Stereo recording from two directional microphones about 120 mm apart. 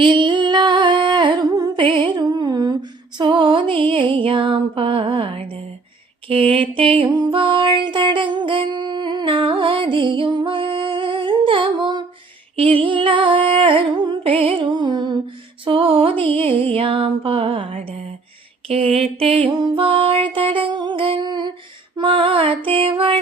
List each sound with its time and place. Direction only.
0.0 s humming: 40° right (ahead or behind)
1.7 s music: 45° right (ahead or behind)
12.5 s music: 50° right (ahead or behind)
18.7 s a sound: 55° right (ahead or behind)
19.5 s music: 40° right (ahead or behind)